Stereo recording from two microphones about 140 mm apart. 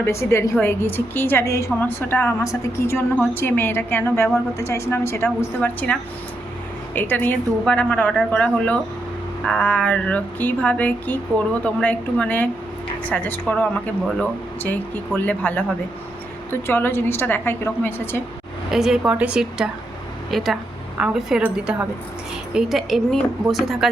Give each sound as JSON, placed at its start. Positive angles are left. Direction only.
{"t": 0.0, "sound": "a woman's voice", "side_deg": 20}
{"t": 8.1, "sound": "speech", "side_deg": -5}
{"t": 8.4, "sound": "a woman's voice", "side_deg": 10}
{"t": 18.7, "sound": "speech", "side_deg": -5}